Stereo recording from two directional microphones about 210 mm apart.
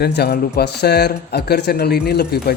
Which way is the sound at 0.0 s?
50° left (ahead or behind).